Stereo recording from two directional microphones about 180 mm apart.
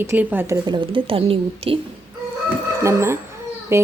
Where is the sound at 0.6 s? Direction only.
25° right (ahead or behind).